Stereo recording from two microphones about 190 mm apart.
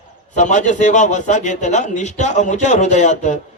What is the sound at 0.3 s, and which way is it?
A man's voice, 40° left (ahead or behind).